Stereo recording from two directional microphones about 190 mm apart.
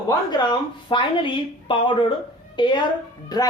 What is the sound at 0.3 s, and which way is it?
Speech, 25° left (ahead or behind).